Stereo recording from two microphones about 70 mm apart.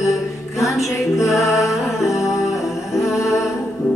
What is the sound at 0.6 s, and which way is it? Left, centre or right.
Music, left.